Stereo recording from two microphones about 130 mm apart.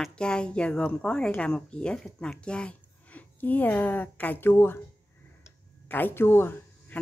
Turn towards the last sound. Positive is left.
turn(degrees=15)  # may be behind; listen again after turning